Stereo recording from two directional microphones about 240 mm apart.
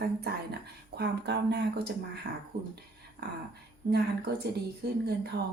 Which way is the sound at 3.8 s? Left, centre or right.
Right.